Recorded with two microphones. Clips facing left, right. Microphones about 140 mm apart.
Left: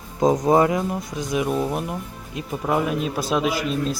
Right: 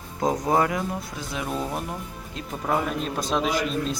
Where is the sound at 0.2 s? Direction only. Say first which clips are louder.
Left 5 dB; 20° left (ahead or behind).